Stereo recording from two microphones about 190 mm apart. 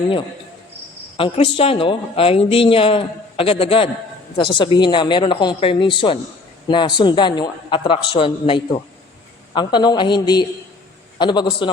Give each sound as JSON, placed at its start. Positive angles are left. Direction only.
{"t": 1.1, "sound": "speech", "side_deg": 30}